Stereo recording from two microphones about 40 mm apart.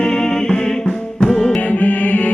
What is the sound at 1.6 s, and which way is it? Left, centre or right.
Music, left.